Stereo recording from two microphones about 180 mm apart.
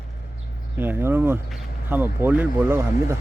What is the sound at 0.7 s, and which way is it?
Speech, 10° right (ahead or behind).